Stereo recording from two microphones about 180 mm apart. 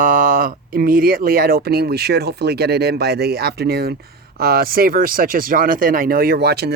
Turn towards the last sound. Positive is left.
turn(degrees=-65)  # may be behind; listen again after turning